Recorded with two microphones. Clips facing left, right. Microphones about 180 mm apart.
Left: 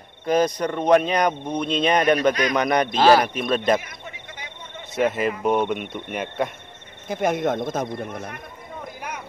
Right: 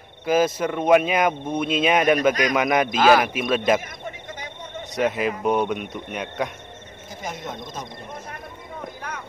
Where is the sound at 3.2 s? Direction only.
5° right (ahead or behind).